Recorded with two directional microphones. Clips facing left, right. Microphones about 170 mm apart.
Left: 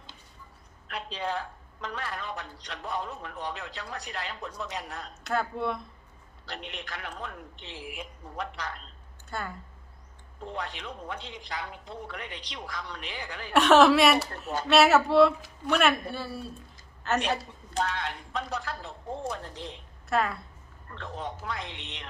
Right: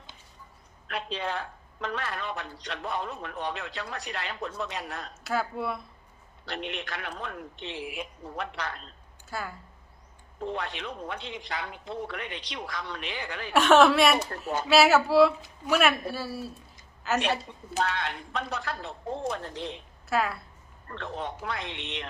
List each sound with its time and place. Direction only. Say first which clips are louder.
0.9 s a woman's voice: right 1 dB; 70° right (ahead or behind)
5.2 s a woman's voice: left 1 dB; 5° right (ahead or behind)
6.4 s a woman's voice: right 5 dB; 70° right (ahead or behind)
9.3 s a woman's voice: even; 5° right (ahead or behind)
10.5 s a woman's voice: right 1 dB; 70° right (ahead or behind)
13.5 s a woman's voice: even; centre (ahead or behind)
17.7 s a woman's voice: right 1 dB; 70° right (ahead or behind)
20.1 s a woman's voice: even; centre (ahead or behind)
20.9 s a woman's voice: right 2 dB; 70° right (ahead or behind)